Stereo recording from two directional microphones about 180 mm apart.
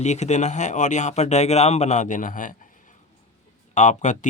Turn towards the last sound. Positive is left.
turn(degrees=40)  # may be behind; listen again after turning